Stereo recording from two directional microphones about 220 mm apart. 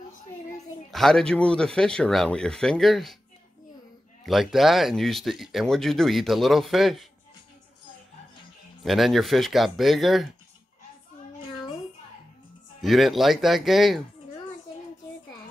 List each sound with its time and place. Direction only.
0.9 s speech: centre (ahead or behind)
4.3 s speech: centre (ahead or behind)
8.8 s speech: centre (ahead or behind)
12.8 s speech: centre (ahead or behind)